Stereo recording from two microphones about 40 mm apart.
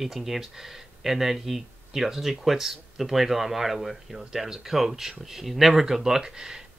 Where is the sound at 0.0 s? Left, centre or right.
Centre.